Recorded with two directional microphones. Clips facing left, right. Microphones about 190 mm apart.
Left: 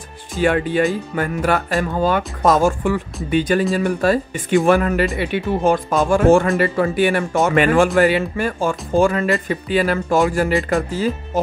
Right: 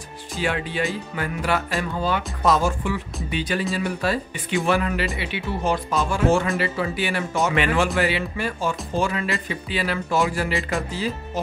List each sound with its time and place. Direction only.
0.4 s speech: 50° left (ahead or behind)